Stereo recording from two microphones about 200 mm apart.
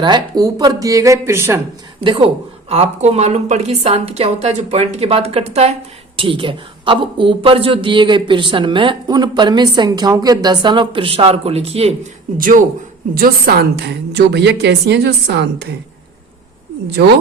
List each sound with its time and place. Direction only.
0.0 s speech: 20° right (ahead or behind)
2.0 s a woman's voice: 25° right (ahead or behind)
12.4 s a woman's voice: 40° right (ahead or behind); by 15.4 s 60° right (ahead or behind)